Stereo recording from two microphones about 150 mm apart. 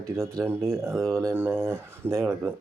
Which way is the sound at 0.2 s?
20° right (ahead or behind).